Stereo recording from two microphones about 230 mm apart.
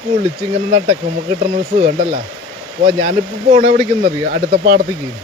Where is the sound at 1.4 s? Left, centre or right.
Right.